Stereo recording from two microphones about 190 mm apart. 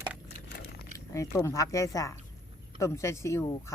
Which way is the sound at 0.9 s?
15° left (ahead or behind).